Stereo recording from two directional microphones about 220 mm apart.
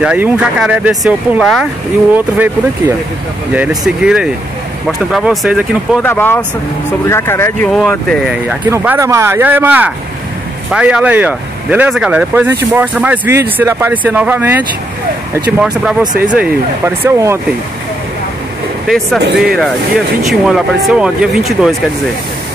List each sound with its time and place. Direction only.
0.0 s speech: 5° right (ahead or behind)
3.5 s speech: 5° right (ahead or behind)
6.0 s speech: 10° left (ahead or behind)
8.3 s speech: 10° right (ahead or behind)
16.0 s speech: 20° right (ahead or behind)
19.3 s speech: centre (ahead or behind)